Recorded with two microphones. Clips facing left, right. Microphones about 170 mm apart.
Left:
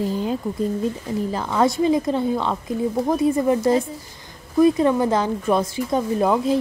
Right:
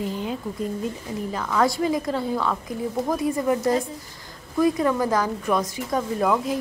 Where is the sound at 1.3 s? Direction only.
25° left (ahead or behind).